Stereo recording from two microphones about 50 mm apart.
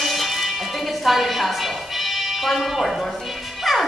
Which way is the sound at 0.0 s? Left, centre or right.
Centre.